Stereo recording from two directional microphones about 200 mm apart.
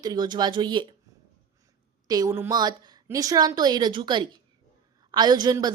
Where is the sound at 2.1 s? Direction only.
15° right (ahead or behind).